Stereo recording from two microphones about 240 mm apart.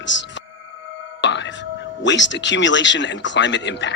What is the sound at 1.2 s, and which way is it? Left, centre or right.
Whispering, left.